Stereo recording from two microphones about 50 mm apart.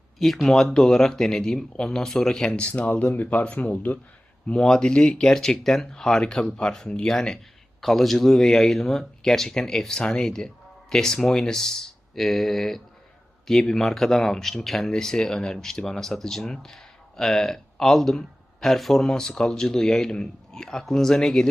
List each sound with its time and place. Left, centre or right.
0.2 s speech: centre
2.6 s speech: left
4.4 s speech: centre
7.8 s speech: centre